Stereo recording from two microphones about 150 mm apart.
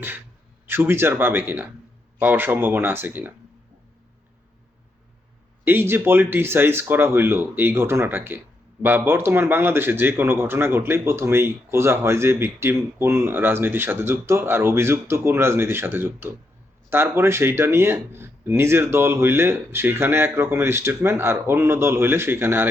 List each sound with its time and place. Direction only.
0.7 s a man's voice: 15° right (ahead or behind)
5.6 s a man's voice: 15° right (ahead or behind)